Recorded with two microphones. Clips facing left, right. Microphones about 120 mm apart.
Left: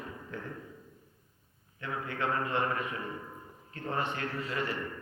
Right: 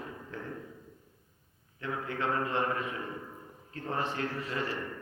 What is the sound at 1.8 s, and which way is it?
Speech, 30° right (ahead or behind).